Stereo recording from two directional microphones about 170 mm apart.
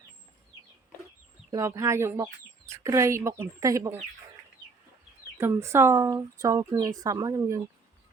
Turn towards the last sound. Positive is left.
turn(degrees=-20)  # may be behind; listen again after turning